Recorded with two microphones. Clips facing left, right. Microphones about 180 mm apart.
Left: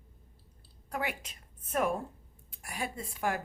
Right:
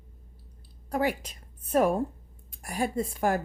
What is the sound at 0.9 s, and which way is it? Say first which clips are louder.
A woman's voice: right 8 dB; 35° right (ahead or behind).